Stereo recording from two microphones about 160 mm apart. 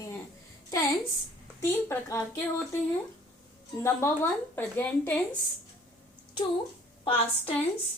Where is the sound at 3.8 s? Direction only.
15° left (ahead or behind).